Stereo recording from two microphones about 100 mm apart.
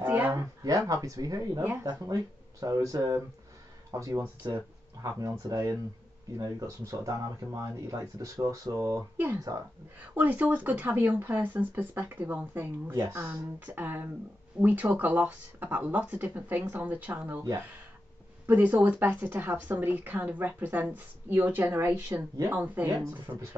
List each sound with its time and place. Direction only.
0.0 s a sound: 20° right (ahead or behind)
0.3 s speech: 35° right (ahead or behind)
1.6 s speech: 20° right (ahead or behind)
2.6 s speech: 35° right (ahead or behind)
4.4 s speech: 45° right (ahead or behind)
5.0 s speech: 35° right (ahead or behind)
9.1 s speech: 20° right (ahead or behind)
13.1 s speech: 30° right (ahead or behind)
13.7 s speech: 20° right (ahead or behind)
18.5 s speech: 20° right (ahead or behind)